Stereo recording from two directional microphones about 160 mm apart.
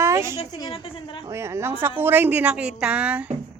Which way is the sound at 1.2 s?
15° right (ahead or behind).